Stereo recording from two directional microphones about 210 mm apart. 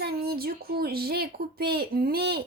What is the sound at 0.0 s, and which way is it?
A woman's voice, 50° right (ahead or behind).